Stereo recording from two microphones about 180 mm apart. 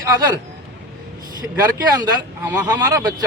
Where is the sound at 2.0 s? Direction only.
10° right (ahead or behind).